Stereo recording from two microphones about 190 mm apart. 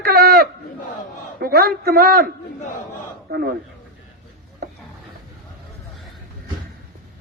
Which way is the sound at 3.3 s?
60° right (ahead or behind).